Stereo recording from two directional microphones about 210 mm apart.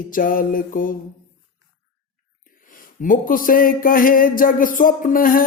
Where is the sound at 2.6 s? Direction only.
40° left (ahead or behind).